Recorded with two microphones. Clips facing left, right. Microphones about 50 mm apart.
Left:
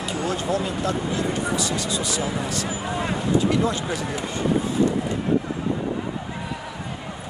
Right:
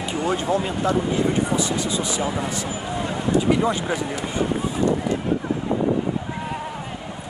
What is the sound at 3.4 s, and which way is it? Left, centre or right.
Speech, centre.